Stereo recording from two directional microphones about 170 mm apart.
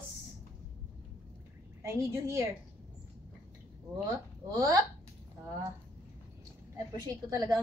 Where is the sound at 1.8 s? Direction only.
15° right (ahead or behind).